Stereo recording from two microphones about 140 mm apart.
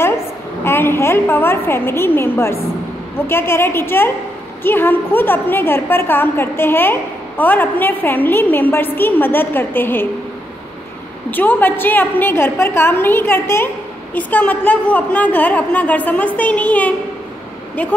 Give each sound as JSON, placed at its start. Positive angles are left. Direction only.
{"t": 0.7, "sound": "a woman's voice", "side_deg": 15}
{"t": 11.2, "sound": "a woman's voice", "side_deg": 15}